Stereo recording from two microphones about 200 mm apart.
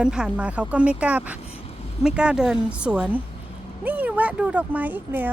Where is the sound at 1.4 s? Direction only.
30° left (ahead or behind).